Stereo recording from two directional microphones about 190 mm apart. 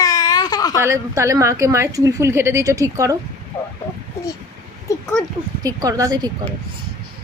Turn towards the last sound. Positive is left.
turn(degrees=-20)  # may be behind; listen again after turning